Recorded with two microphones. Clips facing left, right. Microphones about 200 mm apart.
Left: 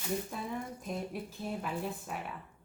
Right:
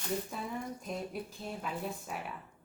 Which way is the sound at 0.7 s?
Centre (ahead or behind).